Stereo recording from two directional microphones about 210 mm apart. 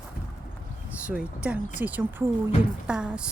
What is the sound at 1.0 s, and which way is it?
Speech, 5° right (ahead or behind).